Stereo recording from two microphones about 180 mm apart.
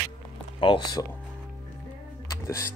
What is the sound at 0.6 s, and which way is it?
Speech, 25° left (ahead or behind).